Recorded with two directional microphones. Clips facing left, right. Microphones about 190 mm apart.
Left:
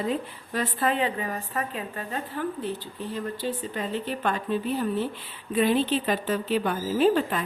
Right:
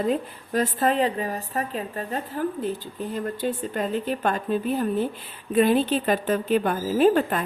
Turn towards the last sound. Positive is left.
turn(degrees=-50)  # may be behind; listen again after turning